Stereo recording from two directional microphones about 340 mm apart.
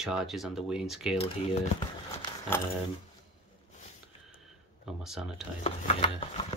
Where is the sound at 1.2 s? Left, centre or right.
Centre.